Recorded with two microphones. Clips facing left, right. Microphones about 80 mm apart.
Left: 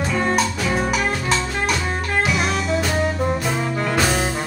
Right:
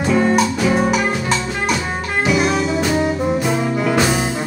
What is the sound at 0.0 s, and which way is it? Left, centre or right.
Music, centre.